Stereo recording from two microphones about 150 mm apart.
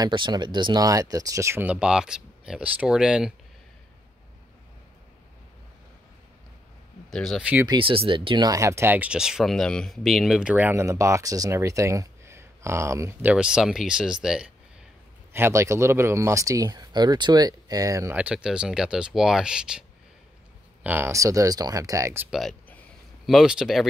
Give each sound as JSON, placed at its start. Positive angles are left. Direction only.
{"t": 0.0, "sound": "speech", "side_deg": -30}
{"t": 7.1, "sound": "speech", "side_deg": 0}
{"t": 7.6, "sound": "speech", "side_deg": -35}
{"t": 15.3, "sound": "speech", "side_deg": -15}
{"t": 18.1, "sound": "speech", "side_deg": -5}
{"t": 20.8, "sound": "speech", "side_deg": -15}
{"t": 22.3, "sound": "speech", "side_deg": 0}